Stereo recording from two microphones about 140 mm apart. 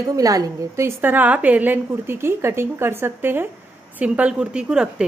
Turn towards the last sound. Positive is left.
turn(degrees=-5)  # may be behind; listen again after turning